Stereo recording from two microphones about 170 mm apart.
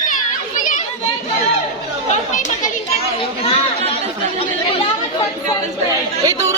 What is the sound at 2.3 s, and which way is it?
Chatter, 45° left (ahead or behind).